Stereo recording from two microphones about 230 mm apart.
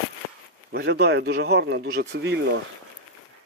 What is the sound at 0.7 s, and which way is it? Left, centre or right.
Speech, right.